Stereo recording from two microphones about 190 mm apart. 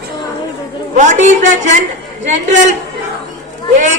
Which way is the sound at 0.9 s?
40° right (ahead or behind).